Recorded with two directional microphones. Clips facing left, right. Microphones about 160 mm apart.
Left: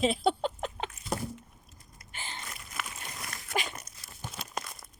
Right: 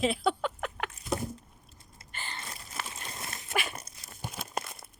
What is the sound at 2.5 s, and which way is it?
Dog, 35° right (ahead or behind).